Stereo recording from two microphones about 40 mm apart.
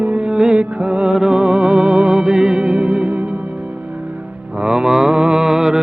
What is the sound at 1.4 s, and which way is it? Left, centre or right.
Music, right.